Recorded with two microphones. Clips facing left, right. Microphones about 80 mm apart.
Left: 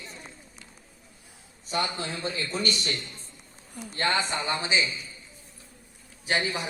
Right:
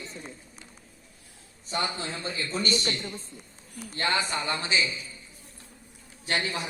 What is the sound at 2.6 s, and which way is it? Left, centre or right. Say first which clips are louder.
Speech: right 2 dB; right.